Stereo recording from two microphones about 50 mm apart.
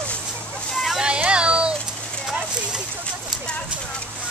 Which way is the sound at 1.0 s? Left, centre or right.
Right.